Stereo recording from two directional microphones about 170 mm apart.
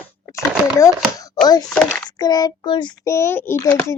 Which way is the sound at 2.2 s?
20° left (ahead or behind).